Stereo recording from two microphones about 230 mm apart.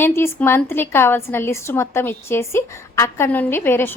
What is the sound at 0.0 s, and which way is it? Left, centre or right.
A woman's voice, centre.